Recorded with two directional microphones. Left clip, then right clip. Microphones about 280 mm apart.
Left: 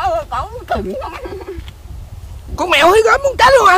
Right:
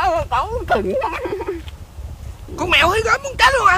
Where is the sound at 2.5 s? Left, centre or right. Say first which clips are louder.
Left 5 dB; left.